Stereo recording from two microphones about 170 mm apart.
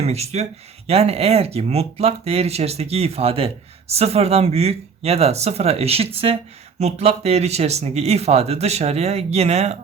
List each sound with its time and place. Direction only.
0.0 s speech: 40° right (ahead or behind)